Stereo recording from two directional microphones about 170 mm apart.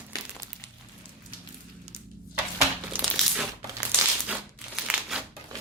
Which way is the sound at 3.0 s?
Centre (ahead or behind).